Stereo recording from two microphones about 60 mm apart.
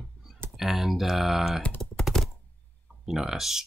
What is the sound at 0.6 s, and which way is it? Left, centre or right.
Speech, centre.